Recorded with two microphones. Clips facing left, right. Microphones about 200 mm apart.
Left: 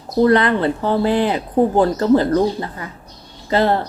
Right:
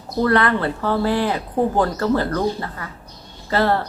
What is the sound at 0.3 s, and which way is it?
A woman's voice, 20° left (ahead or behind).